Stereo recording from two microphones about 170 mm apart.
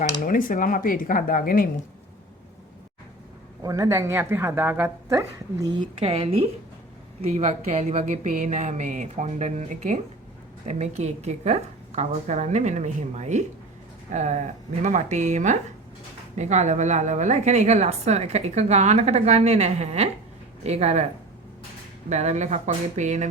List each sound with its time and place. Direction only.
0.3 s speech: 50° left (ahead or behind)
3.6 s a woman's voice: 20° right (ahead or behind); by 21.0 s 40° right (ahead or behind)
22.1 s a woman's voice: 40° right (ahead or behind)